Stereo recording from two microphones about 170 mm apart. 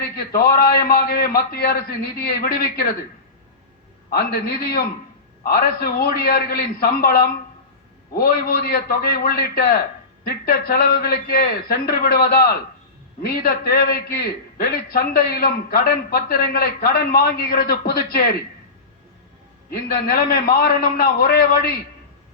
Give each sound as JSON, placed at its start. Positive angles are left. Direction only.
{"t": 0.3, "sound": "a man's voice", "side_deg": 65}
{"t": 4.1, "sound": "a man's voice", "side_deg": 65}
{"t": 19.7, "sound": "a man's voice", "side_deg": 60}